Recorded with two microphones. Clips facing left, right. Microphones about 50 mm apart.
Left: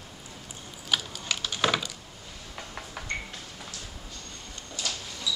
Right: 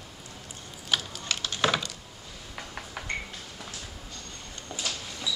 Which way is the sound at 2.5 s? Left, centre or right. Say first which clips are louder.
Right 1 dB; centre.